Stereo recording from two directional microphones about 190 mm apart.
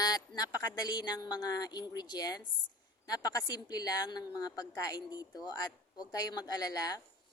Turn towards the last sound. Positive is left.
turn(degrees=20)  # may be behind; listen again after turning